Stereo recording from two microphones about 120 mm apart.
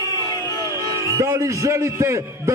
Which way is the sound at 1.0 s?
25° right (ahead or behind).